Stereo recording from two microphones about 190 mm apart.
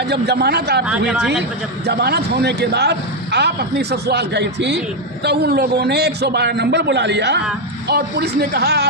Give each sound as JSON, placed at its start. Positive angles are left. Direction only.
{"t": 0.1, "sound": "a man's voice", "side_deg": -60}
{"t": 0.9, "sound": "speech", "side_deg": -5}
{"t": 1.9, "sound": "a man's voice", "side_deg": -55}